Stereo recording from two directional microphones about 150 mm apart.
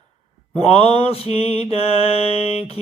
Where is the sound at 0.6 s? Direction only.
40° left (ahead or behind).